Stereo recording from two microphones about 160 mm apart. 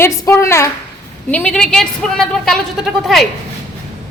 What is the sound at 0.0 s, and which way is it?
A woman's voice, 15° left (ahead or behind).